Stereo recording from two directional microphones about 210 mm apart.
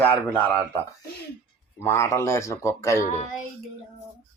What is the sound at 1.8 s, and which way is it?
Speech, 10° left (ahead or behind).